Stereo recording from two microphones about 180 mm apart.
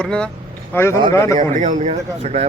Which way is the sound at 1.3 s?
45° right (ahead or behind).